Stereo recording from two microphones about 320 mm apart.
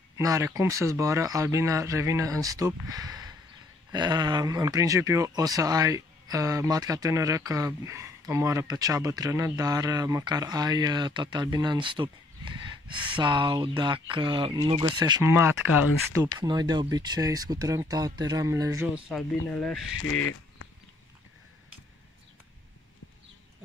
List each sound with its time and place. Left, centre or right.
0.2 s speech: centre
15.7 s speech: left
16.3 s speech: centre
19.0 s speech: centre
20.0 s speech: left